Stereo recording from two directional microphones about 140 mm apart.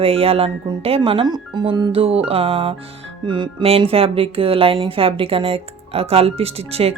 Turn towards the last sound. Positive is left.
turn(degrees=-45)  # may be behind; listen again after turning